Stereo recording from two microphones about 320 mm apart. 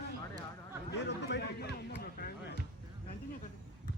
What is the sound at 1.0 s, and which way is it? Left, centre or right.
Speech, left.